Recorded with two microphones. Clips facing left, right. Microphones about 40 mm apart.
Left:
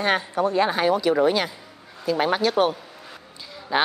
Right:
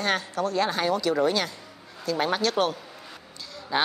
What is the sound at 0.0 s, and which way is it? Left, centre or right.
A woman's voice, left.